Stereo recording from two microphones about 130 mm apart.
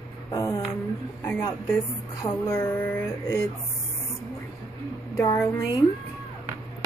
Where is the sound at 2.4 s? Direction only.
15° left (ahead or behind).